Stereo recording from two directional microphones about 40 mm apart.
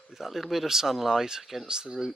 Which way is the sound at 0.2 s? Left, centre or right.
Centre.